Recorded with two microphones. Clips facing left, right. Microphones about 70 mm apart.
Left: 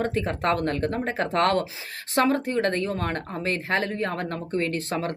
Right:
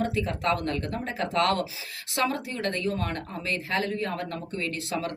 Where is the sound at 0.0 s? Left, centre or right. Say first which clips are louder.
Left 2 dB; left.